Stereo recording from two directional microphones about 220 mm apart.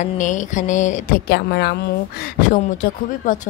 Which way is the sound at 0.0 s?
35° left (ahead or behind).